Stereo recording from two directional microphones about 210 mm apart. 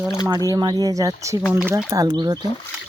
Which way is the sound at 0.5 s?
20° right (ahead or behind).